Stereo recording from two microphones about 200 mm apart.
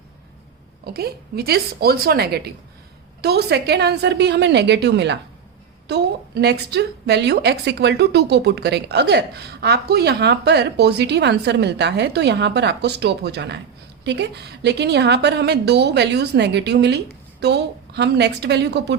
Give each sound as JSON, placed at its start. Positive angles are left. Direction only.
{"t": 0.9, "sound": "a woman's voice", "side_deg": -50}